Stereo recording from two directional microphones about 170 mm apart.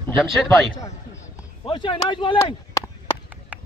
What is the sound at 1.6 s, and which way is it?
Speech, 30° left (ahead or behind).